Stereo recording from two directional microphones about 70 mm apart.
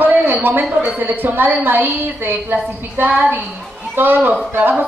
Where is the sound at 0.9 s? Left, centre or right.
Right.